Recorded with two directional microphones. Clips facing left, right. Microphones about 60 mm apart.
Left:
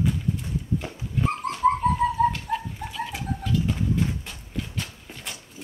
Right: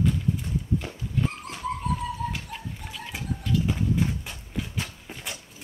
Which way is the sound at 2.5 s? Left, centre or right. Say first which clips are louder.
Left 11 dB; left.